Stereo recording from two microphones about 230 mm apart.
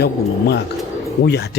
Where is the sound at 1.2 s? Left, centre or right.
Left.